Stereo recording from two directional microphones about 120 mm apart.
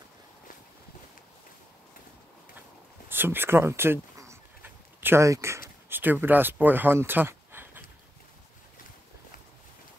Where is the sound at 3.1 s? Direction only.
20° right (ahead or behind).